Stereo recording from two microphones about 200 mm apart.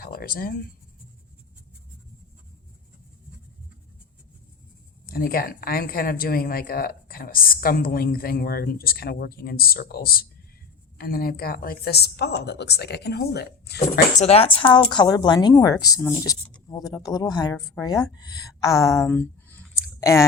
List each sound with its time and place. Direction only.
0.0 s a sound: 45° left (ahead or behind)
5.0 s speech: 45° left (ahead or behind)
14.2 s a woman's voice: 30° left (ahead or behind); by 20.2 s 15° left (ahead or behind)